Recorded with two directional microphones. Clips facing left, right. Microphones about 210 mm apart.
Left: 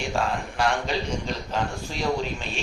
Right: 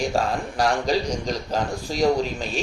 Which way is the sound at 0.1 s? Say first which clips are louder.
Right 3 dB; 40° right (ahead or behind).